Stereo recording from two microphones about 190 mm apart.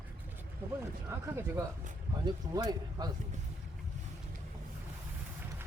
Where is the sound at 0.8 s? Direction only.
15° right (ahead or behind).